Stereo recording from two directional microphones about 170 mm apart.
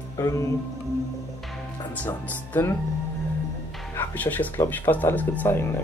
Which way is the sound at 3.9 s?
10° left (ahead or behind).